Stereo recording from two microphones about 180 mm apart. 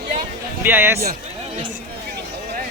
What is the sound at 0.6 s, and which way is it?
Speech, 10° right (ahead or behind).